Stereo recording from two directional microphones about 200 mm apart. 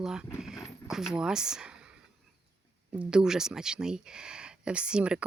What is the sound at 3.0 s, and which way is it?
Speech, 5° right (ahead or behind).